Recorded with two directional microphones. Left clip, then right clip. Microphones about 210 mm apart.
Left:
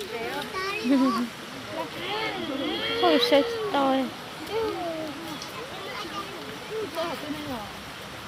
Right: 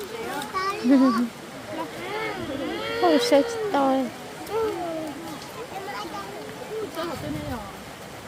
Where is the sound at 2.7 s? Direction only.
5° right (ahead or behind).